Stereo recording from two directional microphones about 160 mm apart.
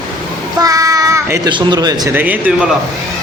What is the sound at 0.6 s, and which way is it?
Child singing, 20° right (ahead or behind).